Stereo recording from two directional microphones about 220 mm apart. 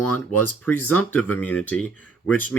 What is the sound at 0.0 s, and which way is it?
Speech, 90° left.